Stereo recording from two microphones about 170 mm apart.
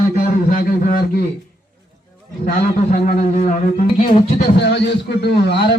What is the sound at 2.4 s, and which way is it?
A man's voice, 50° left (ahead or behind).